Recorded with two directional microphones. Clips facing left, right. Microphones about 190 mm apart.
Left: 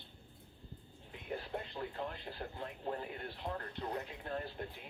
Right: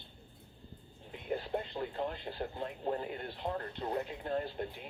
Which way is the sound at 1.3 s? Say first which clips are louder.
Right 6 dB; 25° right (ahead or behind).